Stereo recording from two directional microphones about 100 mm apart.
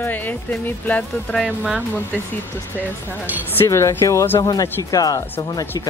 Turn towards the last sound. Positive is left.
turn(degrees=40)  # may be behind; listen again after turning